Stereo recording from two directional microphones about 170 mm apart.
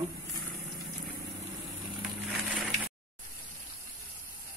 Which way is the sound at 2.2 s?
Centre (ahead or behind).